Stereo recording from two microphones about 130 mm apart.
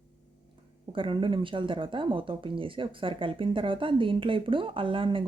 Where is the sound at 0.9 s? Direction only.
40° right (ahead or behind).